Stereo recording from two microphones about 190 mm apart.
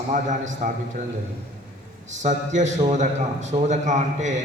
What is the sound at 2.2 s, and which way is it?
A man's voice, 40° right (ahead or behind).